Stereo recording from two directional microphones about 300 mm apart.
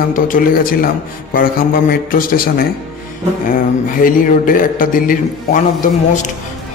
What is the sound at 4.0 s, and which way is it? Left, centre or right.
A man's voice, left.